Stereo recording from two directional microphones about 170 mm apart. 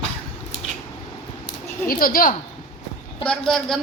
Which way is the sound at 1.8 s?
55° left (ahead or behind).